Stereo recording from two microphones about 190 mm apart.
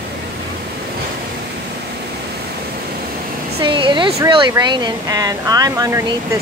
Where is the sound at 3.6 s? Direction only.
25° right (ahead or behind).